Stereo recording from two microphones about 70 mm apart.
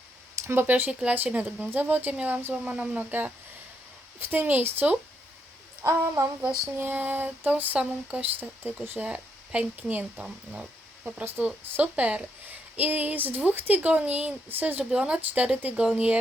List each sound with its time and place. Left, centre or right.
0.4 s speech: right
5.8 s speech: right
6.7 s speech: right
9.0 s speech: centre
14.8 s speech: centre